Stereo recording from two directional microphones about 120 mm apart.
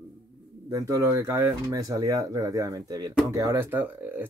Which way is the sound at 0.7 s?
25° right (ahead or behind).